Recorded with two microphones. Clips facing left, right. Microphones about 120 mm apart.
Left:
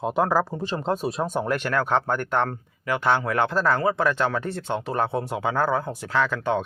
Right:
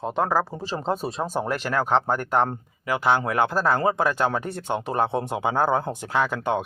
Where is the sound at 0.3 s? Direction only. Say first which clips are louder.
Left 1 dB; centre (ahead or behind).